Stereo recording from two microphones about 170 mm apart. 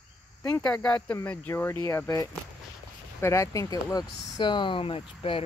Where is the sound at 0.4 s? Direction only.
10° left (ahead or behind).